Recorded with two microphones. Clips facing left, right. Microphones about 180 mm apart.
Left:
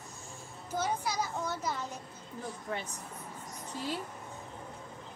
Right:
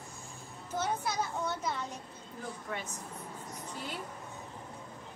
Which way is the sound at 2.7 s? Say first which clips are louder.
Left 2 dB; 30° left (ahead or behind).